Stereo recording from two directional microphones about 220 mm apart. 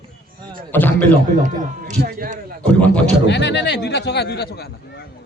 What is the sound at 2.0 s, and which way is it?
Speech, 40° right (ahead or behind).